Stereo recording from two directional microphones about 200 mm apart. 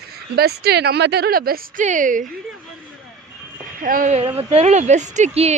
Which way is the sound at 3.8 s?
45° right (ahead or behind).